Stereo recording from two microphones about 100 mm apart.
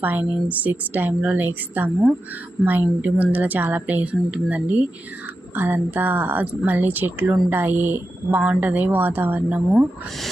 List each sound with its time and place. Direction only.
0.0 s a woman's voice: 20° right (ahead or behind)